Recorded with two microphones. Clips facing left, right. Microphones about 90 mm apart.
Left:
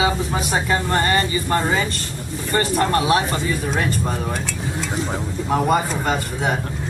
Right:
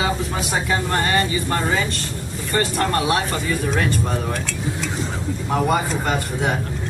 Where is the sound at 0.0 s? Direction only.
Centre (ahead or behind).